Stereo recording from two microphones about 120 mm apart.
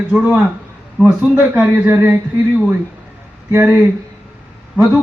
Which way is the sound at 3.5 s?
15° right (ahead or behind).